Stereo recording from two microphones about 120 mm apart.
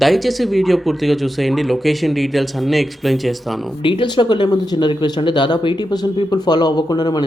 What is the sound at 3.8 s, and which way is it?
Speech, 45° left (ahead or behind).